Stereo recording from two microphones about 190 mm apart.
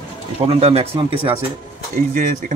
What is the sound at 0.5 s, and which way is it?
Speech, 30° right (ahead or behind).